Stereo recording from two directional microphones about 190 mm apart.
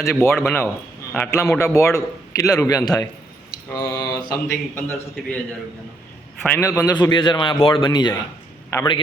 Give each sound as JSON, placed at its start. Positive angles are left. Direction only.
{"t": 0.0, "sound": "a man's voice", "side_deg": 10}
{"t": 6.4, "sound": "a man's voice", "side_deg": 10}